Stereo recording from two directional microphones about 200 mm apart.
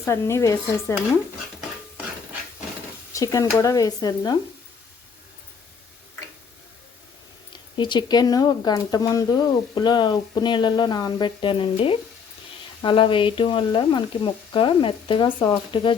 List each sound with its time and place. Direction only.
0.0 s speech: 15° left (ahead or behind)
3.1 s speech: 15° left (ahead or behind)
7.5 s speech: 20° left (ahead or behind)